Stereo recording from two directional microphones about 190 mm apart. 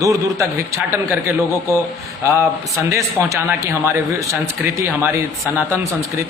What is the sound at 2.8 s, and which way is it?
A man's voice, 15° right (ahead or behind).